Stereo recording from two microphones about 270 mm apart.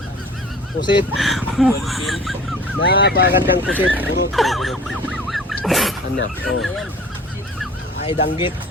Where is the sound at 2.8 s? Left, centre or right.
Left.